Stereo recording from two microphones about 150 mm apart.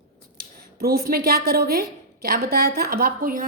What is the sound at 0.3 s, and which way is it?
Speech, 90° right.